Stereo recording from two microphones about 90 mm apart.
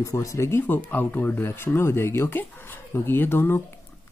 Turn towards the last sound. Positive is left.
turn(degrees=25)  # may be behind; listen again after turning